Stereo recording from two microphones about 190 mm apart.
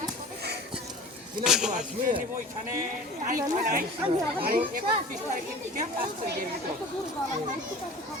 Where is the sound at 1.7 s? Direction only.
45° right (ahead or behind).